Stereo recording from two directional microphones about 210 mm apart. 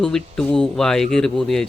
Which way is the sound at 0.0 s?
5° left (ahead or behind).